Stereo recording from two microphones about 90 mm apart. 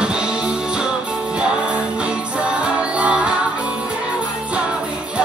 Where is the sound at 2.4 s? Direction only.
15° right (ahead or behind).